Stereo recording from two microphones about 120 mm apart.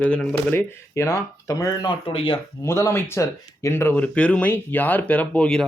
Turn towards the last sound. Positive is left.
turn(degrees=5)  # may be behind; listen again after turning